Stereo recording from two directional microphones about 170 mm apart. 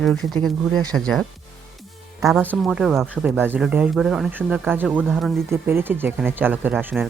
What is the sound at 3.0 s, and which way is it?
Speech, 10° right (ahead or behind).